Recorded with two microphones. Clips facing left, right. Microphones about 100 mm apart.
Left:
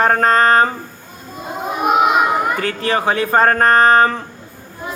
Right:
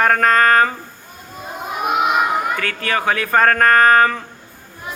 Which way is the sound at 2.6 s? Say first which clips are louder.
Left 3 dB; 30° left (ahead or behind).